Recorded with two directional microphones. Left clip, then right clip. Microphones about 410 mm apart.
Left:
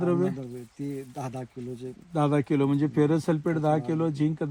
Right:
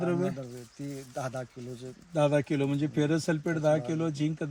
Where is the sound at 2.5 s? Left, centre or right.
Centre.